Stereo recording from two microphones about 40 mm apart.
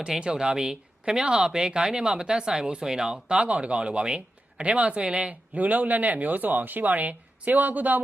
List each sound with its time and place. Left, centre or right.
0.2 s speech: right